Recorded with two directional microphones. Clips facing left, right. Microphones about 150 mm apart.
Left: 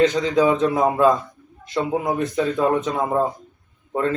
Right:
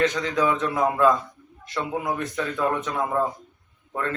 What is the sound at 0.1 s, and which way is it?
Speech, 30° left (ahead or behind).